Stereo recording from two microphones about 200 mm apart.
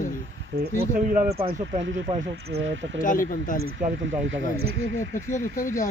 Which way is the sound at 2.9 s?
40° left (ahead or behind).